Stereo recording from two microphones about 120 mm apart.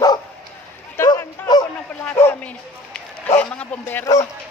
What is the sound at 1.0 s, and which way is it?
Bow-wow, 30° left (ahead or behind).